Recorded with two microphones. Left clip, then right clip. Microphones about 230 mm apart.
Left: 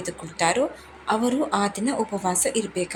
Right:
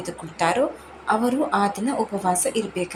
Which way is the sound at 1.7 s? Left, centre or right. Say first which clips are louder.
Right 2 dB; left.